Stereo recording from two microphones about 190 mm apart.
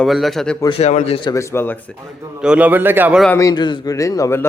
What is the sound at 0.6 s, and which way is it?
Speech, 30° left (ahead or behind).